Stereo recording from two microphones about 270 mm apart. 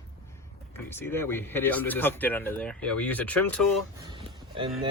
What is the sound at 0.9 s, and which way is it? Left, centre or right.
Speech, centre.